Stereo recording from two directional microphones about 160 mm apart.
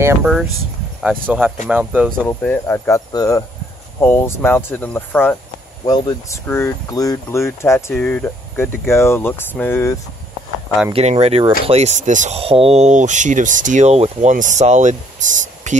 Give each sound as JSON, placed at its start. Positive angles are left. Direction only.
{"t": 0.2, "sound": "speech", "side_deg": -5}
{"t": 1.7, "sound": "speech", "side_deg": -10}
{"t": 2.2, "sound": "speech", "side_deg": 15}
{"t": 10.9, "sound": "speech", "side_deg": -40}
{"t": 12.4, "sound": "speech", "side_deg": -35}